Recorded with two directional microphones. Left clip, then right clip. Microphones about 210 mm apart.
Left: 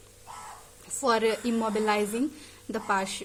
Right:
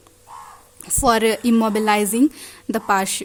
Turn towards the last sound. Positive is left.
turn(degrees=-45)  # may be behind; listen again after turning